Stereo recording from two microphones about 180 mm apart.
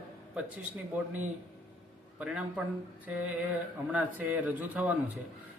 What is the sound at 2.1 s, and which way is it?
Speech, 5° right (ahead or behind).